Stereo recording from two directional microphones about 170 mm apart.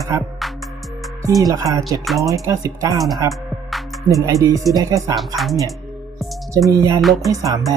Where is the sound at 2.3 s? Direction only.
20° right (ahead or behind).